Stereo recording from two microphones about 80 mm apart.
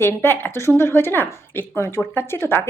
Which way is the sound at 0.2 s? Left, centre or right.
Left.